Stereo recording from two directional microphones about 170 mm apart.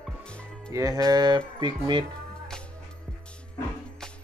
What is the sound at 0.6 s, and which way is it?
Speech, 20° right (ahead or behind).